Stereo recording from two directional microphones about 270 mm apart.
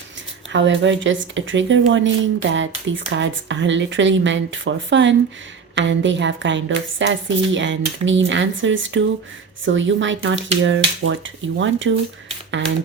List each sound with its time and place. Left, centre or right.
0.5 s speech: right